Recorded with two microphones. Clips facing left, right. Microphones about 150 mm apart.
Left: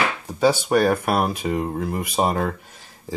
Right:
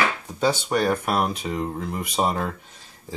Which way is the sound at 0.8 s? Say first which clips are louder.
Left 3 dB; 10° left (ahead or behind).